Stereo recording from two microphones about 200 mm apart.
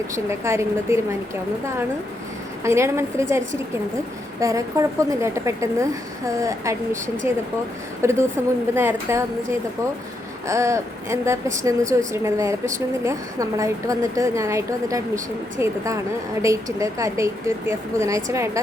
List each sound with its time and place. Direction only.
0.3 s a woman's voice: 15° right (ahead or behind)
2.6 s a woman's voice: 15° right (ahead or behind)